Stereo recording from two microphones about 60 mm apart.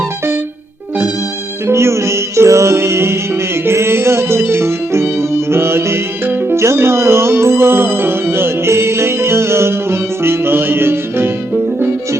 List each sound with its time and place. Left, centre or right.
1.6 s music: right
6.6 s music: right